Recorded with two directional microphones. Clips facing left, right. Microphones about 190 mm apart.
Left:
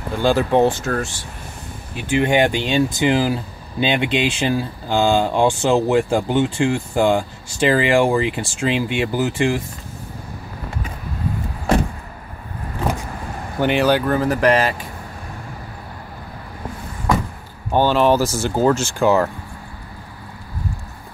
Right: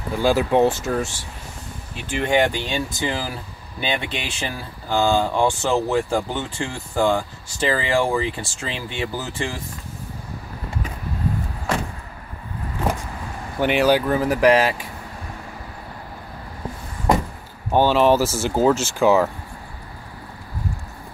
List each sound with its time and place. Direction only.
0.2 s speech: 5° right (ahead or behind)
2.2 s speech: 15° left (ahead or behind)
13.6 s speech: 5° right (ahead or behind)
17.7 s speech: 5° right (ahead or behind)